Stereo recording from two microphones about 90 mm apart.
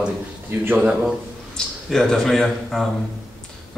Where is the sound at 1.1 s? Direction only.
5° left (ahead or behind).